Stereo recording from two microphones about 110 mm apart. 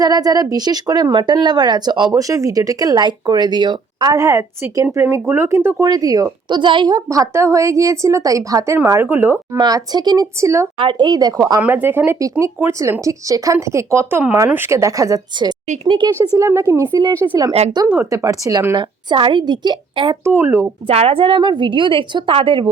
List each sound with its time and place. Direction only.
0.0 s speech: 35° right (ahead or behind)
4.1 s a woman's voice: 30° right (ahead or behind)
5.8 s a woman's voice: 35° right (ahead or behind); by 9.6 s 20° right (ahead or behind)
9.6 s speech: 35° right (ahead or behind)
10.3 s a woman's voice: 25° right (ahead or behind)
10.8 s speech: 45° right (ahead or behind)
11.6 s a woman's voice: 20° right (ahead or behind)
15.6 s speech: 90° right
16.3 s a woman's voice: 25° right (ahead or behind)
17.8 s a woman's voice: 20° right (ahead or behind)
18.1 s speech: 30° right (ahead or behind)
18.8 s a woman's voice: 50° right (ahead or behind)
20.2 s a woman's voice: 20° right (ahead or behind)
20.8 s a woman's voice: 60° right (ahead or behind)